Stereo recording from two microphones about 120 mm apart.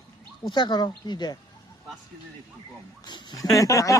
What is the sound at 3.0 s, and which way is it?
Speech, 35° left (ahead or behind).